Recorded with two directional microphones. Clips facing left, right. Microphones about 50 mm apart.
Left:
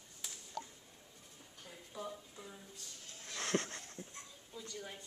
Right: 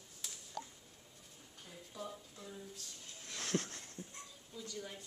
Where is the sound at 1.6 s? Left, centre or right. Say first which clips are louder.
Left 1 dB; centre.